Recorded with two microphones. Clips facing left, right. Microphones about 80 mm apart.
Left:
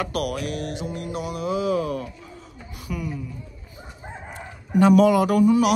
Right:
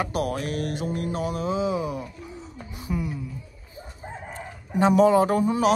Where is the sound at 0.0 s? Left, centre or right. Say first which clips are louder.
Even; right.